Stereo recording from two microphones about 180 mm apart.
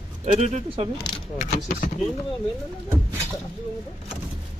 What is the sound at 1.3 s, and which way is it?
Speech, 45° left (ahead or behind).